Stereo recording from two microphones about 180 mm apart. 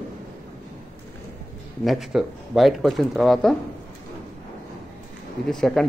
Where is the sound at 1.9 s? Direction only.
Centre (ahead or behind).